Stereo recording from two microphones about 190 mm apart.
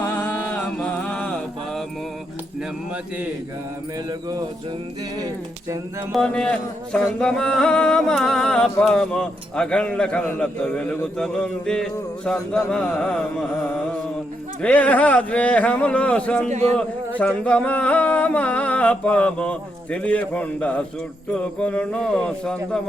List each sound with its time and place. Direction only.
0.0 s mantra: 10° left (ahead or behind)
5.1 s speech: 20° right (ahead or behind)
6.1 s a man's voice: 5° left (ahead or behind)
14.6 s a sound: 10° left (ahead or behind)
16.5 s speech: 35° right (ahead or behind)
17.2 s a sound: 5° left (ahead or behind)
21.3 s a man's voice: 5° left (ahead or behind)